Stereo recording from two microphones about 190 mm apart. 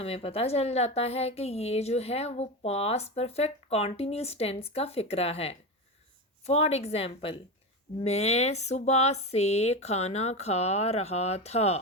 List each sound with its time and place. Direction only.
0.0 s a woman's voice: 30° left (ahead or behind)